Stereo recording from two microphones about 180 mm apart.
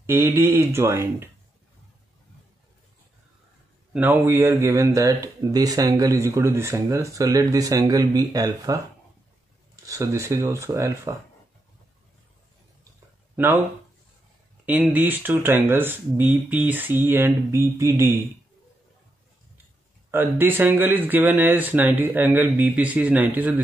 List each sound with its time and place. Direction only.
0.0 s speech: 15° right (ahead or behind)
3.9 s speech: 10° right (ahead or behind)
9.8 s speech: 15° right (ahead or behind)
14.7 s speech: 10° right (ahead or behind)
20.1 s speech: 10° right (ahead or behind)